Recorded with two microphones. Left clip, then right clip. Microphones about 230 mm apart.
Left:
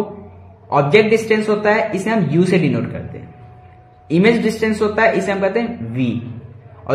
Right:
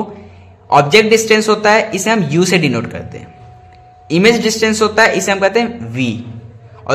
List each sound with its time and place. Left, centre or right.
0.7 s a man's voice: right